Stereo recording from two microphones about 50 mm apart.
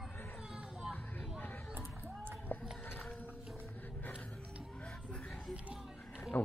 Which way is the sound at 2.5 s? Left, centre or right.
Left.